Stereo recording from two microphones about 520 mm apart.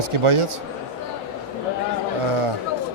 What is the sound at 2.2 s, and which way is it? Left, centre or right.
Chatter, right.